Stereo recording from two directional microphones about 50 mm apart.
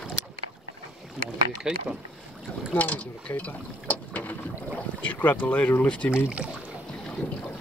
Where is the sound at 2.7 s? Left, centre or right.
Left.